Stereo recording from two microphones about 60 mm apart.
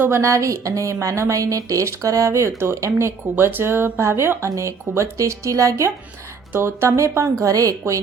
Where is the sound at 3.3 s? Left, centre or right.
Right.